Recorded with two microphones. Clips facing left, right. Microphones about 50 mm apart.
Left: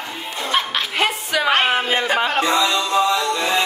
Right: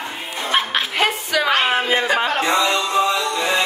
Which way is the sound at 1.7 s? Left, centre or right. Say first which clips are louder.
Right 1 dB; centre.